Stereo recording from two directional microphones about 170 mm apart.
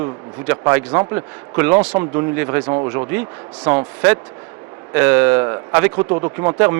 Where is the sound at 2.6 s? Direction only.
30° right (ahead or behind).